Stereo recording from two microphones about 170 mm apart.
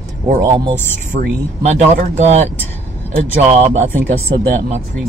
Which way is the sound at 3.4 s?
35° right (ahead or behind).